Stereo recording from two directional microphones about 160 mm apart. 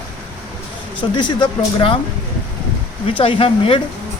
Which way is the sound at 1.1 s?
30° left (ahead or behind).